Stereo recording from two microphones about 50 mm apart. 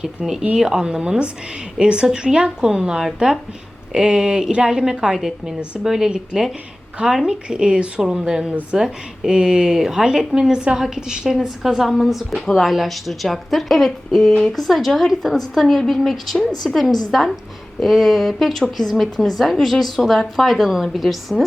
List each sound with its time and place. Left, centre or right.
0.0 s a woman's voice: centre